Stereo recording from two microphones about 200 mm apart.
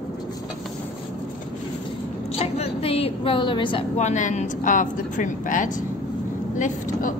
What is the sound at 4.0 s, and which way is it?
A woman's voice, 40° left (ahead or behind).